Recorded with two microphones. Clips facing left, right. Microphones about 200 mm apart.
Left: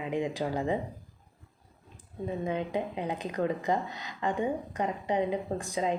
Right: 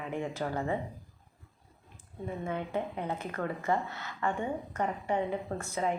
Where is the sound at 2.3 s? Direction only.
15° left (ahead or behind).